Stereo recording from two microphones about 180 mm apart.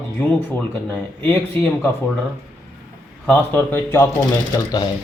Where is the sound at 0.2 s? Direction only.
10° left (ahead or behind).